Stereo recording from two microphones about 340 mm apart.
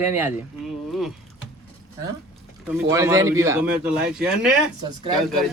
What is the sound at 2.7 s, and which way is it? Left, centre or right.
A man's voice, centre.